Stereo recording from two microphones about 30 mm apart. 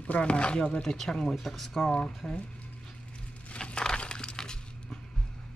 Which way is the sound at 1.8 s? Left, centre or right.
Left.